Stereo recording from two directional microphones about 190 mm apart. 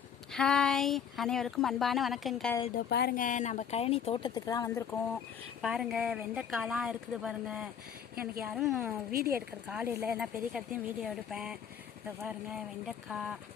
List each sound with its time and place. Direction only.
0.3 s speech: 5° left (ahead or behind)
2.7 s speech: 55° left (ahead or behind); by 4.8 s 20° left (ahead or behind)
5.6 s speech: centre (ahead or behind)
8.1 s speech: 50° right (ahead or behind)
8.4 s speech: 5° right (ahead or behind)
9.1 s speech: 50° right (ahead or behind)
9.6 s speech: 10° right (ahead or behind)
13.1 s speech: centre (ahead or behind)